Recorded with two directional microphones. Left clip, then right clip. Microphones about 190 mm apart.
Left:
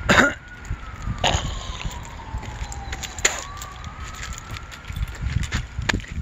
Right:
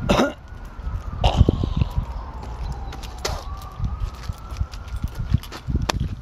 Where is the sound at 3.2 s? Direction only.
20° left (ahead or behind).